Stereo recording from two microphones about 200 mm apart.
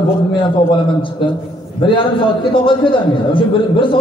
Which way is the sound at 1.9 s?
25° left (ahead or behind).